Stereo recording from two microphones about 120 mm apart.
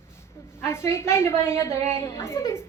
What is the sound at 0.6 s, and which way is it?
A woman's voice, 20° left (ahead or behind).